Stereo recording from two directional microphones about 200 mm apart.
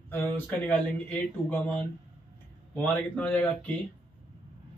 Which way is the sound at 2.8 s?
10° left (ahead or behind).